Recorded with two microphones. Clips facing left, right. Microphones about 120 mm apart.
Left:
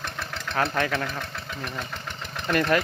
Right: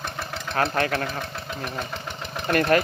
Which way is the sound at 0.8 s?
45° right (ahead or behind).